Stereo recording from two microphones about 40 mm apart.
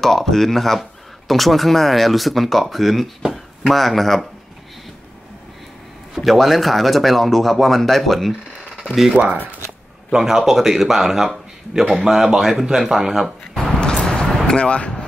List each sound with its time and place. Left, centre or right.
0.0 s speech: centre
6.1 s speech: centre
9.1 s speech: right
10.1 s speech: centre
13.4 s a sound: left
14.0 s a sound: centre
14.4 s vehicle: left